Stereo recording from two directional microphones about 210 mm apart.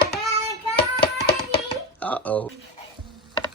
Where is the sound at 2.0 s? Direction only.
5° left (ahead or behind).